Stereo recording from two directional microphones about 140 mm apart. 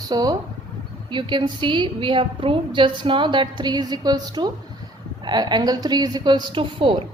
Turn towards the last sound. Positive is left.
turn(degrees=-35)  # may be behind; listen again after turning